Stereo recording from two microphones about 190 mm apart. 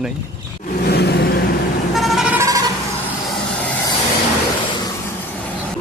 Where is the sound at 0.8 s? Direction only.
60° left (ahead or behind).